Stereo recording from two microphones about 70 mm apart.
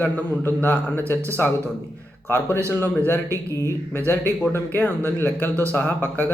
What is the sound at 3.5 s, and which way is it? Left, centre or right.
Speech, right.